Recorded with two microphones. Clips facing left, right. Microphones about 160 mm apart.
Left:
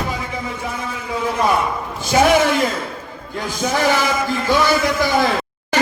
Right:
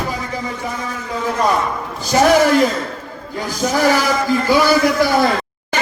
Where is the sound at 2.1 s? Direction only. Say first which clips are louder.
Right 2 dB; 5° left (ahead or behind).